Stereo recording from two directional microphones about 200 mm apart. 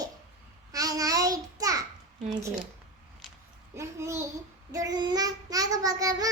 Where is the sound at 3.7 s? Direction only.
15° right (ahead or behind).